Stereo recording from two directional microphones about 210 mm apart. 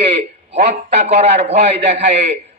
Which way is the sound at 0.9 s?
30° right (ahead or behind).